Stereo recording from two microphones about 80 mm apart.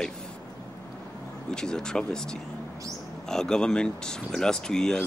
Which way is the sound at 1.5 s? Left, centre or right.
Centre.